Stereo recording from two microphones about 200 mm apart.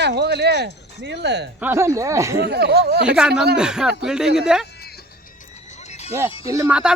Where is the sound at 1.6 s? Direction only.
10° right (ahead or behind).